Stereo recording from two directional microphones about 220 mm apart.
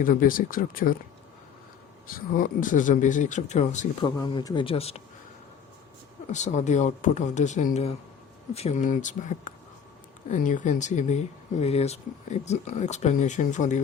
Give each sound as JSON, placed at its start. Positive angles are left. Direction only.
{"t": 0.0, "sound": "speech", "side_deg": 40}
{"t": 2.0, "sound": "speech", "side_deg": 40}
{"t": 4.0, "sound": "speech", "side_deg": 20}
{"t": 6.3, "sound": "speech", "side_deg": 30}